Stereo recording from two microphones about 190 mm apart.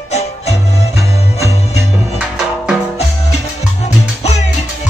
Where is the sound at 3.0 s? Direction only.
35° left (ahead or behind).